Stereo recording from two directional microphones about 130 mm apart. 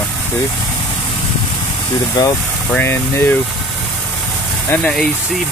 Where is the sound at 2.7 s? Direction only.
15° left (ahead or behind).